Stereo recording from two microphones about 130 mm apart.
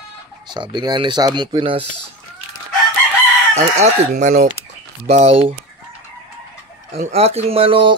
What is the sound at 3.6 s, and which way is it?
Speech, 60° right (ahead or behind).